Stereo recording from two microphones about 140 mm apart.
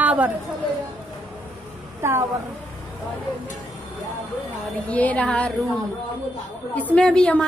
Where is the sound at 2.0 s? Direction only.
20° right (ahead or behind).